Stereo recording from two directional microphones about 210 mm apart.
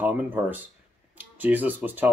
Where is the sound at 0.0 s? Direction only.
10° right (ahead or behind).